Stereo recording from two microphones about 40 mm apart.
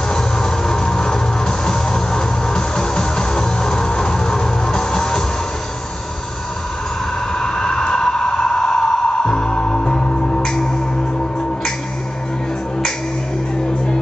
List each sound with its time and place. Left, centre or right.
0.1 s music: centre
7.3 s vehicle: centre